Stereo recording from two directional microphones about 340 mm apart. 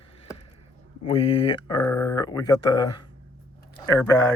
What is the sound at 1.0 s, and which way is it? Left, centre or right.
Speech, centre.